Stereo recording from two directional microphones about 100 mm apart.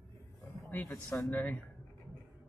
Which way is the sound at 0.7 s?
15° left (ahead or behind).